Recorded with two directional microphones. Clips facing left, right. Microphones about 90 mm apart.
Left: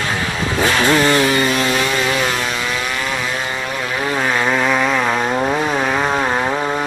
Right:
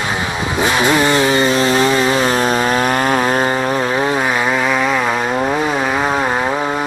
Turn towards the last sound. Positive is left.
turn(degrees=-5)  # may be behind; listen again after turning